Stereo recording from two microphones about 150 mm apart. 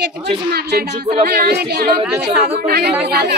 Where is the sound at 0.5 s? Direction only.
90° right.